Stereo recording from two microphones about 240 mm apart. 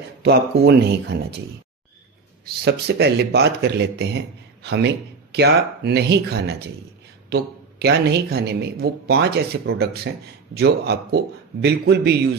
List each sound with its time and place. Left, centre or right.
0.2 s speech: right
2.4 s speech: right